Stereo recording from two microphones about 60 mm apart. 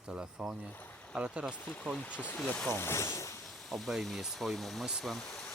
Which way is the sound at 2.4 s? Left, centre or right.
Centre.